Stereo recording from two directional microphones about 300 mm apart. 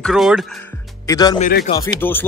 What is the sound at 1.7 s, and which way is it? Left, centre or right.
Speech, centre.